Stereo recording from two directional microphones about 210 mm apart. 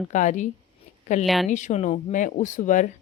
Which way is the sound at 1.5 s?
35° left (ahead or behind).